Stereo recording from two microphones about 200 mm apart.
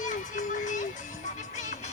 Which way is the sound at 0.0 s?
40° left (ahead or behind).